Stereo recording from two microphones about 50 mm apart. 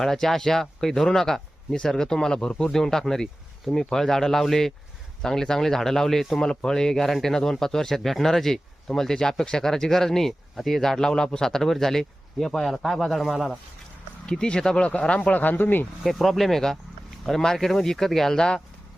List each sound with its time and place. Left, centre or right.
0.0 s speech: centre
14.3 s speech: centre
15.4 s speech: left
16.0 s speech: centre